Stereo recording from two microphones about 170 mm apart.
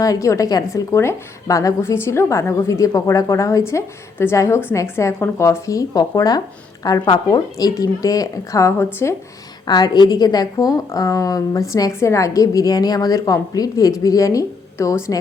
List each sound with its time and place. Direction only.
0.0 s a woman's voice: 20° left (ahead or behind)